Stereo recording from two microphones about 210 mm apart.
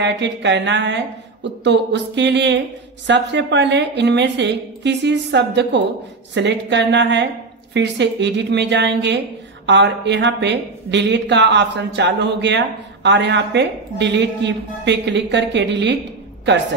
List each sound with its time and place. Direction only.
0.0 s speech: 55° right (ahead or behind)